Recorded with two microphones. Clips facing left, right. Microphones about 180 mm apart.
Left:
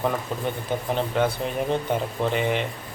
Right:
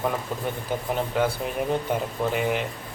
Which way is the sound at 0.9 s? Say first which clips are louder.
Left 1 dB; 5° right (ahead or behind).